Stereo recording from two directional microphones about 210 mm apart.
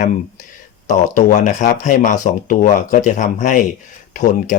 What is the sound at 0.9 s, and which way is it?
Speech, 35° left (ahead or behind).